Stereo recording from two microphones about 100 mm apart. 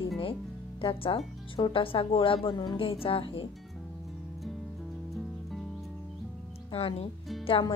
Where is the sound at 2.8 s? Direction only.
65° left (ahead or behind).